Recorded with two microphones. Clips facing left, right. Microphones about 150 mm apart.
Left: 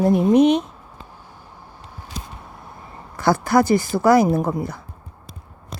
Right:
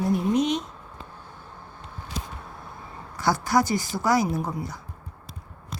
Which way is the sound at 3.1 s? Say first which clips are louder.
Left 5 dB; 55° left (ahead or behind).